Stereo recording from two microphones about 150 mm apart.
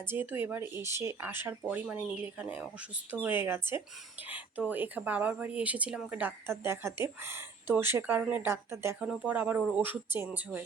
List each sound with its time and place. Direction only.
0.0 s speech: 15° right (ahead or behind)